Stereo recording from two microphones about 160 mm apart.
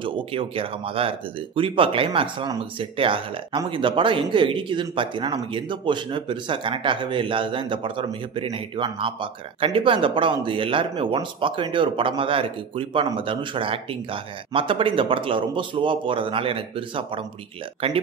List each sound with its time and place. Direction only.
0.0 s speech: 35° right (ahead or behind)